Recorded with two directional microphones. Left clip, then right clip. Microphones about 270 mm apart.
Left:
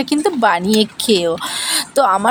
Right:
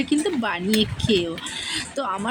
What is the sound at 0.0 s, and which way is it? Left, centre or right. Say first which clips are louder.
Speech: left 8 dB; left.